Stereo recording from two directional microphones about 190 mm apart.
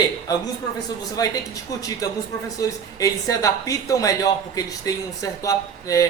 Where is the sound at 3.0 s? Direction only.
15° left (ahead or behind).